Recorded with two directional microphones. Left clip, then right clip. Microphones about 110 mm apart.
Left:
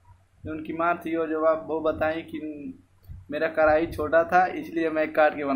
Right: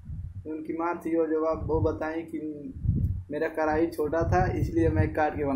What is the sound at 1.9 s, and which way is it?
Speech, 5° left (ahead or behind).